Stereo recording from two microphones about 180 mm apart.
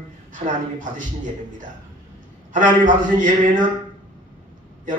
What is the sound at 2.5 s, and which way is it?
Speech, 45° right (ahead or behind).